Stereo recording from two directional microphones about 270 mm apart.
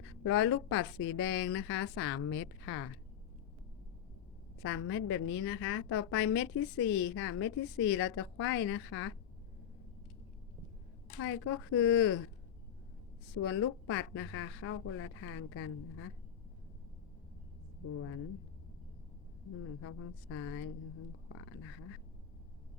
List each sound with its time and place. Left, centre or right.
0.2 s a woman's voice: left
4.6 s a woman's voice: left
11.2 s a woman's voice: left
13.4 s a woman's voice: left
20.3 s a woman's voice: left